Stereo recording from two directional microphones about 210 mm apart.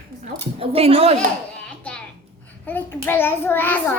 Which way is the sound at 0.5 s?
25° right (ahead or behind).